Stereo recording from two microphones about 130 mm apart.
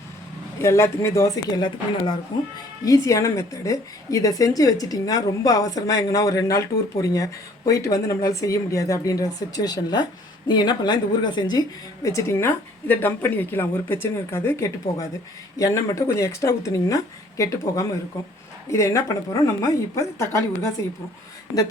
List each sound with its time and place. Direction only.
0.6 s a woman's voice: 20° left (ahead or behind)
2.8 s a woman's voice: 25° left (ahead or behind)
12.0 s a woman's voice: 25° left (ahead or behind)